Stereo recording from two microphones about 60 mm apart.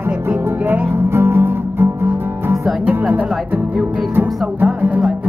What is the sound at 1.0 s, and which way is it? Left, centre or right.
Music, right.